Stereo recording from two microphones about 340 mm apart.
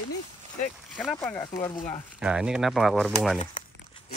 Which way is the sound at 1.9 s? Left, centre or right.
Centre.